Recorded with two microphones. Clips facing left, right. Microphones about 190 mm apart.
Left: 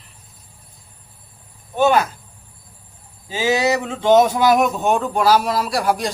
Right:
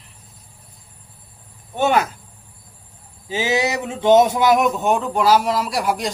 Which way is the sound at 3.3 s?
20° right (ahead or behind).